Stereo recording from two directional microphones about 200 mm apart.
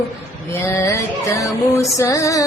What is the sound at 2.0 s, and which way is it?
Female singing, 15° left (ahead or behind).